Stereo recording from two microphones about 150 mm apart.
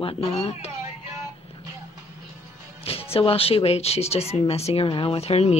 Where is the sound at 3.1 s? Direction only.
40° left (ahead or behind).